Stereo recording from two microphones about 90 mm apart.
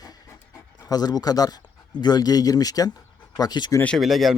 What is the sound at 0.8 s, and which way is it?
Speech, 45° left (ahead or behind).